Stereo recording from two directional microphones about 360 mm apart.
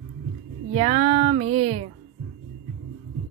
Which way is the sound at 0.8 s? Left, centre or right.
Centre.